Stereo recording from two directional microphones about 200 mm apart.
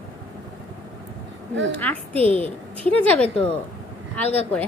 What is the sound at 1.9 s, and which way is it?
A woman's voice, 10° left (ahead or behind).